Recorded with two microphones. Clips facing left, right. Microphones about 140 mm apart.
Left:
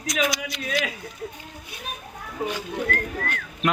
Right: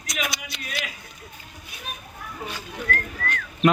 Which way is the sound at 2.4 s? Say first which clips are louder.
Left 7 dB; 15° left (ahead or behind).